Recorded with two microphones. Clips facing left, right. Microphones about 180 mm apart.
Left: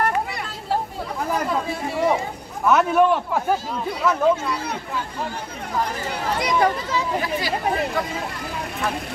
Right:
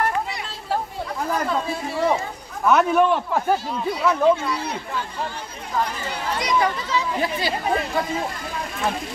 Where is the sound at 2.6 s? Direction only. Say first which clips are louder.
Even; centre (ahead or behind).